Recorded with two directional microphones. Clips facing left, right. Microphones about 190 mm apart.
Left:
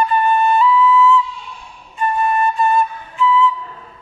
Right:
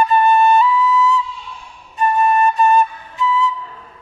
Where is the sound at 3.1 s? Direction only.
40° right (ahead or behind).